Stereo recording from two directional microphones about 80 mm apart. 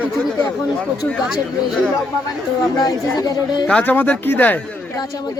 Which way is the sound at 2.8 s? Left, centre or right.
Left.